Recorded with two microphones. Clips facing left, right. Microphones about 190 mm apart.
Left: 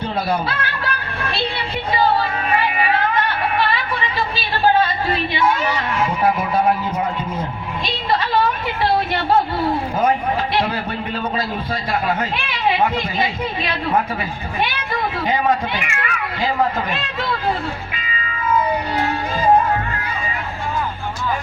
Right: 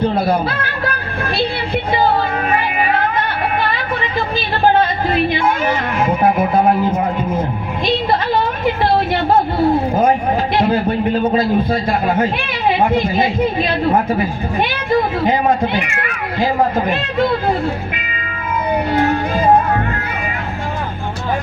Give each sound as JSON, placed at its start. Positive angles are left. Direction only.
{"t": 5.1, "sound": "speech", "side_deg": -50}
{"t": 11.2, "sound": "a man's voice", "side_deg": -25}
{"t": 12.9, "sound": "speech", "side_deg": -50}